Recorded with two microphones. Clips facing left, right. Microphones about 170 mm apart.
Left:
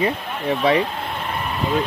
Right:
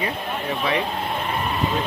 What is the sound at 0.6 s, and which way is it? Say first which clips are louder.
Speech: left 7 dB; 25° left (ahead or behind).